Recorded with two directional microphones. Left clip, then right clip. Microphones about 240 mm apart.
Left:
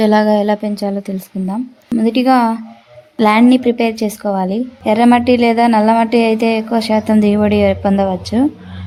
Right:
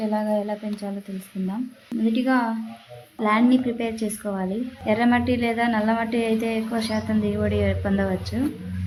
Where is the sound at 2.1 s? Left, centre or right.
Left.